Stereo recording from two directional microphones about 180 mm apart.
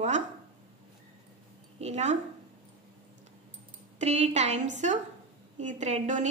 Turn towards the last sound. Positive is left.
turn(degrees=-40)  # may be behind; listen again after turning